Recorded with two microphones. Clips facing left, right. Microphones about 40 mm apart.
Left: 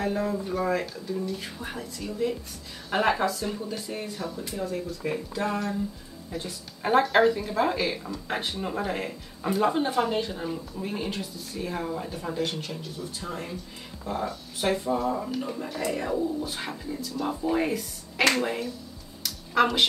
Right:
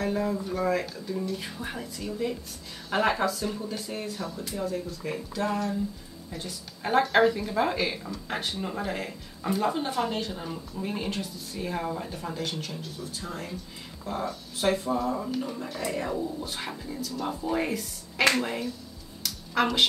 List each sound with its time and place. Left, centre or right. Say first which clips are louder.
0.0 s speech: even; centre
5.1 s speech: right 1 dB; centre
6.3 s speech: left 3 dB; centre
13.2 s speech: left 2 dB; left
14.6 s speech: even; centre
19.2 s a sound: left 3 dB; centre